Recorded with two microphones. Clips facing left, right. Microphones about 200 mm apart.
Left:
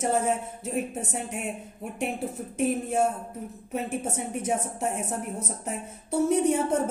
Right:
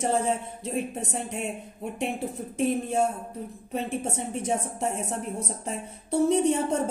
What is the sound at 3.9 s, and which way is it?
Speech, 30° right (ahead or behind).